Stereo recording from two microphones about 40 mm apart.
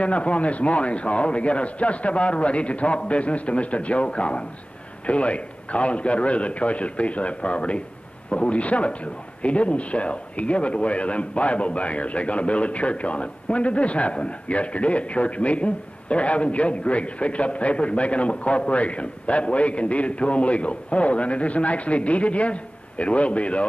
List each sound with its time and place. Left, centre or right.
0.0 s a man's voice: left